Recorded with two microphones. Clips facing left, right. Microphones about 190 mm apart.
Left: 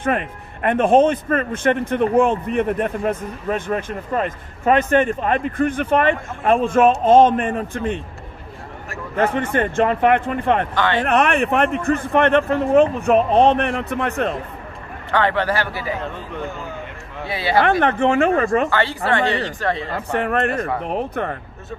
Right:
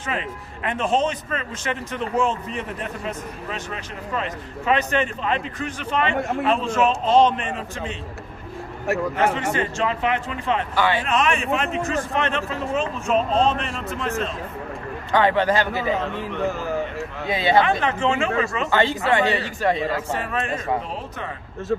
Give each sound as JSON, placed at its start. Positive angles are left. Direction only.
{"t": 0.0, "sound": "a man's voice", "side_deg": 55}
{"t": 9.3, "sound": "a man's voice", "side_deg": 55}
{"t": 10.7, "sound": "a man's voice", "side_deg": -10}
{"t": 11.0, "sound": "a man's voice", "side_deg": 60}
{"t": 15.0, "sound": "a man's voice", "side_deg": -15}
{"t": 17.3, "sound": "speech", "side_deg": -20}
{"t": 17.6, "sound": "a man's voice", "side_deg": 60}
{"t": 18.7, "sound": "a man's voice", "side_deg": -20}
{"t": 20.1, "sound": "a man's voice", "side_deg": 60}